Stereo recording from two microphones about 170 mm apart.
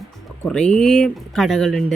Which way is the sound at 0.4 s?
5° left (ahead or behind).